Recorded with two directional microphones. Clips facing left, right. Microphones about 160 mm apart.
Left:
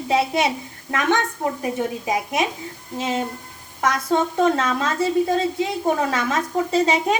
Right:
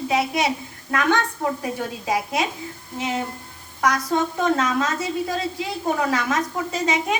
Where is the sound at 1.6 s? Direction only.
20° left (ahead or behind).